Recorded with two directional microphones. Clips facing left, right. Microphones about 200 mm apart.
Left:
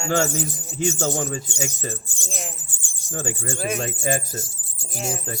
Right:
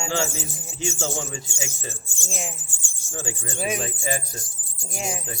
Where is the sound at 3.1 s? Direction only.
55° left (ahead or behind).